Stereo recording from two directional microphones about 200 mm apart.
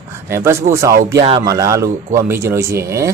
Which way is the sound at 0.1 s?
15° right (ahead or behind).